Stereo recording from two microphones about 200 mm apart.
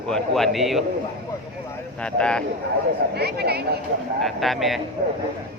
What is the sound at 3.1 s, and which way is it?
Speech, 55° right (ahead or behind).